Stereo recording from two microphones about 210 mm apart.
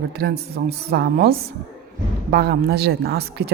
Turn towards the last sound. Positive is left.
turn(degrees=-50)  # may be behind; listen again after turning